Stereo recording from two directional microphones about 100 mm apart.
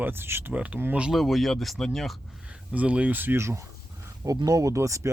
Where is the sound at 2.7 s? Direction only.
15° right (ahead or behind).